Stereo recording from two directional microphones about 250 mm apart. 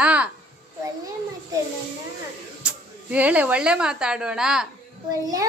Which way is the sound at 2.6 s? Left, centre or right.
Centre.